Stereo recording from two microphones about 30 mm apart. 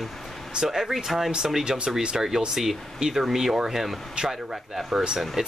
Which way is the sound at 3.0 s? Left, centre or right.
Centre.